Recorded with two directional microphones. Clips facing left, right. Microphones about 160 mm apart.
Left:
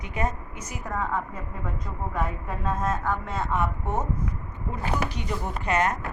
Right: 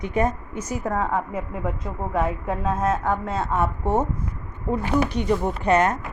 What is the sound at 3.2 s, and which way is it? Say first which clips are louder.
Speech: right 4 dB; 30° right (ahead or behind).